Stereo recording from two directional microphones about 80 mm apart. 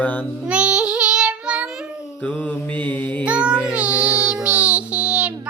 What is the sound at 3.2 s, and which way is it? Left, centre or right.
Child singing, centre.